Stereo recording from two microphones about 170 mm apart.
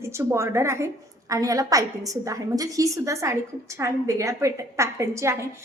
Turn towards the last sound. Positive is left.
turn(degrees=-15)  # may be behind; listen again after turning